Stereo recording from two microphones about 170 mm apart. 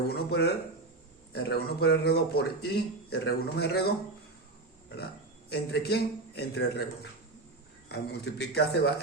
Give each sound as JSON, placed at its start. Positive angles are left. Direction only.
{"t": 0.1, "sound": "a man's voice", "side_deg": 70}
{"t": 5.5, "sound": "a man's voice", "side_deg": 70}